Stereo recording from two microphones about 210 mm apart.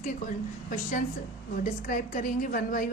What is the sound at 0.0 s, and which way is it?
A woman's voice, 40° left (ahead or behind).